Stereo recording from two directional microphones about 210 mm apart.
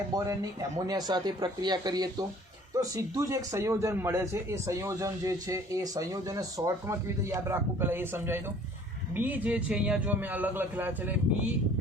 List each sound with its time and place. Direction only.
0.1 s a man's voice: 15° right (ahead or behind)